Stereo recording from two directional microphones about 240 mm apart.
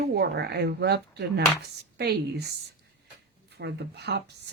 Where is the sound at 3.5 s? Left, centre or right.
Right.